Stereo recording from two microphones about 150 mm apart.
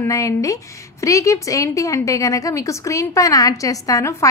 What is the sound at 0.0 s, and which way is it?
A woman's voice, 20° left (ahead or behind).